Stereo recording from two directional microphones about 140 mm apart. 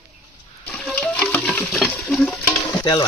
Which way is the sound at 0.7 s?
10° left (ahead or behind).